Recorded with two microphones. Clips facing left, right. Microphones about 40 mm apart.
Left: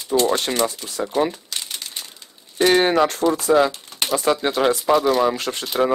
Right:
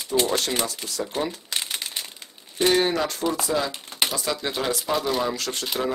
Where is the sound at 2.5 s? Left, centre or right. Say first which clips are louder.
Left 5 dB; left.